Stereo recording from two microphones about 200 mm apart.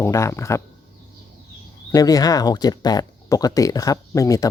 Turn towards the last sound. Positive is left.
turn(degrees=15)  # may be behind; listen again after turning